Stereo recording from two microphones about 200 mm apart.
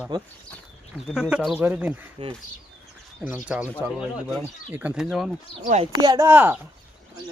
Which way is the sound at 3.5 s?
5° right (ahead or behind).